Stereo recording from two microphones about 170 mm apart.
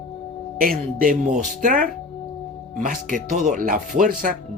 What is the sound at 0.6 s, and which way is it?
Speech, 55° right (ahead or behind).